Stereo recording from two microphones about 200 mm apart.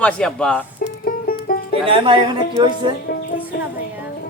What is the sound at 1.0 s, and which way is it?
Music, 45° left (ahead or behind).